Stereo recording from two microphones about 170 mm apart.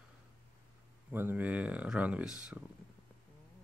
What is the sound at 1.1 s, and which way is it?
Speech, 10° right (ahead or behind).